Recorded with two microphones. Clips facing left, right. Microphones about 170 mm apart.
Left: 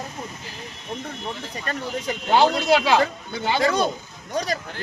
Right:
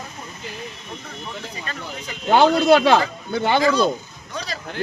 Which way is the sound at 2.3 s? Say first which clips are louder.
Right 4 dB; 55° right (ahead or behind).